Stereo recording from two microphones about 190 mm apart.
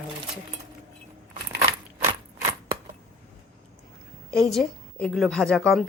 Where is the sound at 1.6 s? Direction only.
35° right (ahead or behind).